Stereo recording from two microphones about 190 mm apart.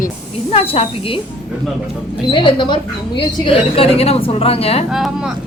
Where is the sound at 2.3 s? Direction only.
25° left (ahead or behind).